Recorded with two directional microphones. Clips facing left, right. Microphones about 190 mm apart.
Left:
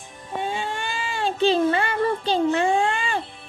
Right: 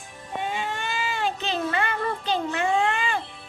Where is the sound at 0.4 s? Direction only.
30° left (ahead or behind).